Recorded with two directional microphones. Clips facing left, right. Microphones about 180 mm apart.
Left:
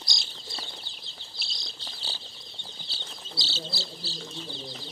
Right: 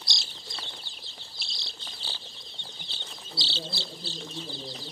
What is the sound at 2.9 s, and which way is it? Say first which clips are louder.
Bird: left 1 dB; 45° left (ahead or behind).